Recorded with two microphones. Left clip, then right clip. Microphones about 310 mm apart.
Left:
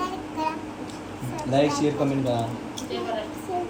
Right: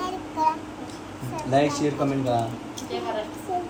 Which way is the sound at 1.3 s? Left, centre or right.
Centre.